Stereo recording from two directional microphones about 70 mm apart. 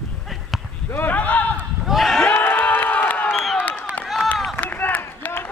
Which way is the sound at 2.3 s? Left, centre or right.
Left.